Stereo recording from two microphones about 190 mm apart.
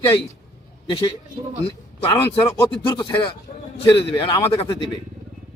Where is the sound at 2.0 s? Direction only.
20° left (ahead or behind).